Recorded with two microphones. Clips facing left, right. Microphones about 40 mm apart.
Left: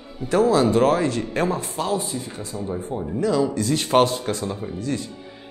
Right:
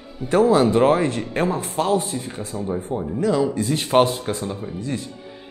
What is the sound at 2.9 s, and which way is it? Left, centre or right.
Speech, centre.